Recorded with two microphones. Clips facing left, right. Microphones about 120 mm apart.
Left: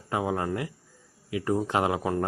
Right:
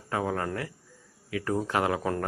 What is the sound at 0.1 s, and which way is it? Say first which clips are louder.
Speech: left 2 dB; 15° left (ahead or behind).